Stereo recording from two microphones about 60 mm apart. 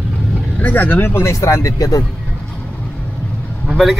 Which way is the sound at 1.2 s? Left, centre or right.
Left.